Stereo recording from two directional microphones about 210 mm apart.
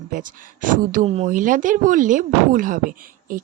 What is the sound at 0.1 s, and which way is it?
Speech, 40° right (ahead or behind).